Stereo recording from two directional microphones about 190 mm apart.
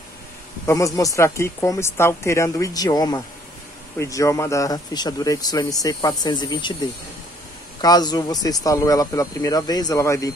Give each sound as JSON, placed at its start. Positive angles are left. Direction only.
{"t": 0.7, "sound": "speech", "side_deg": 15}
{"t": 7.8, "sound": "speech", "side_deg": 20}